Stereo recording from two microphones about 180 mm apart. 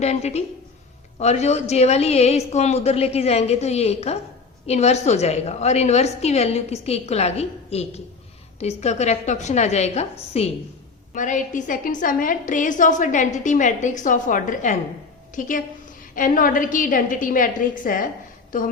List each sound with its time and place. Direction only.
0.0 s a woman's voice: 40° left (ahead or behind)